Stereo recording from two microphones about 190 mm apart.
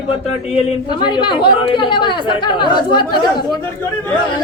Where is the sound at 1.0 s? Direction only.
25° left (ahead or behind).